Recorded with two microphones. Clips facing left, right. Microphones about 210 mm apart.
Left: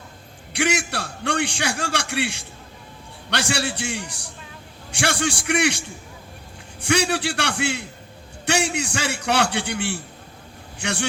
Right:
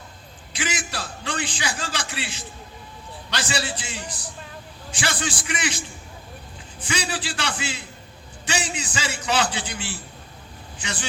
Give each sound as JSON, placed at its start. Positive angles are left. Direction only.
{"t": 0.5, "sound": "a man's voice", "side_deg": 65}
{"t": 6.8, "sound": "a man's voice", "side_deg": 65}